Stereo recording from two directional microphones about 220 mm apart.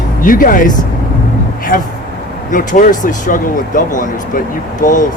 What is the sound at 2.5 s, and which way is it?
Speech, 35° left (ahead or behind).